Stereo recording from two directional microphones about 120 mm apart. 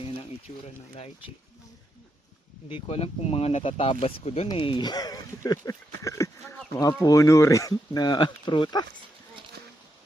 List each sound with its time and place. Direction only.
0.6 s speech: 55° left (ahead or behind)
2.8 s speech: 55° left (ahead or behind)
4.5 s speech: 45° left (ahead or behind)